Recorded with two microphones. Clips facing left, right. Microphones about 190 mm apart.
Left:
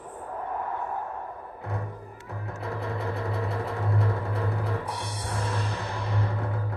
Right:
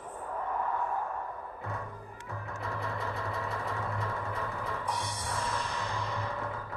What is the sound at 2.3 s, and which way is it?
Music, 20° left (ahead or behind).